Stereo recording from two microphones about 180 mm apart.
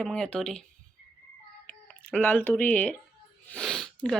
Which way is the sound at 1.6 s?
5° left (ahead or behind).